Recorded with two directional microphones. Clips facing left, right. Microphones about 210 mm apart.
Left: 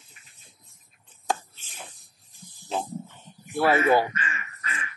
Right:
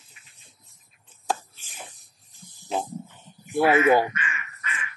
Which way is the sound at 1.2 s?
Centre (ahead or behind).